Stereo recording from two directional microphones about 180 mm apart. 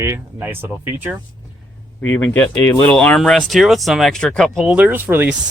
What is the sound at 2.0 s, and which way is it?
Speech, 10° left (ahead or behind).